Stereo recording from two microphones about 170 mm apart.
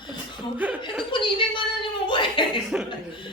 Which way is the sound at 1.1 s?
30° left (ahead or behind).